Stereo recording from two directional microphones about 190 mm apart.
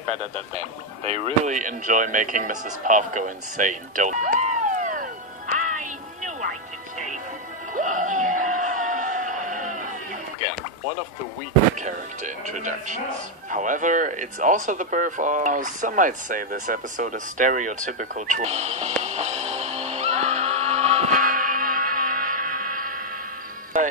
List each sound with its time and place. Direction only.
0.6 s speech: 35° right (ahead or behind)
5.6 s music: 40° right (ahead or behind)
7.7 s a sound: 40° right (ahead or behind)
11.8 s speech: 40° right (ahead or behind)
19.0 s music: 35° right (ahead or behind)